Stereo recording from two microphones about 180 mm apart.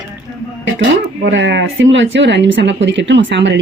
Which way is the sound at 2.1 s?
80° right.